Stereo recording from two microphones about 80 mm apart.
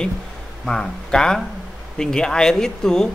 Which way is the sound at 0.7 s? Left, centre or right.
Centre.